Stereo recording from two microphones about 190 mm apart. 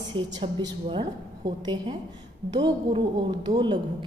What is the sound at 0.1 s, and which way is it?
A woman's voice, 25° right (ahead or behind).